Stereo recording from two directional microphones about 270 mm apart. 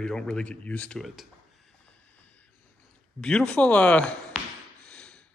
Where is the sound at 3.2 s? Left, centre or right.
Centre.